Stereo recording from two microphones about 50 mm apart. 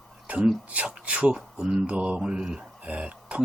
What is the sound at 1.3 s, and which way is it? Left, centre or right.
Speech, centre.